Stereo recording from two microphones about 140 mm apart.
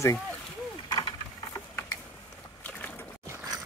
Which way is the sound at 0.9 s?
30° left (ahead or behind).